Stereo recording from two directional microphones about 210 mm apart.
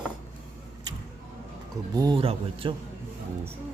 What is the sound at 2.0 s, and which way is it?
Speech, 20° right (ahead or behind).